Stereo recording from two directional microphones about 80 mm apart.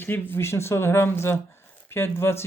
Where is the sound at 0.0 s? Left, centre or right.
Left.